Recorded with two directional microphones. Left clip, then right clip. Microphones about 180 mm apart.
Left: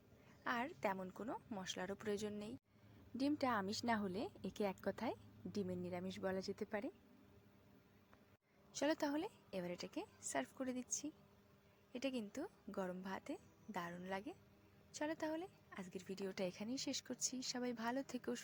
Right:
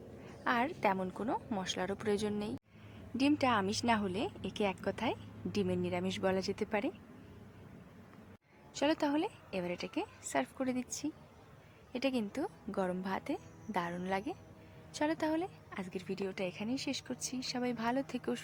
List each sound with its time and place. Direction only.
0.4 s a woman's voice: 15° left (ahead or behind)
8.7 s a woman's voice: 20° left (ahead or behind)